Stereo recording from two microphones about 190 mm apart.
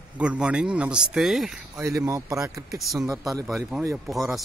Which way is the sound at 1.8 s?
15° right (ahead or behind).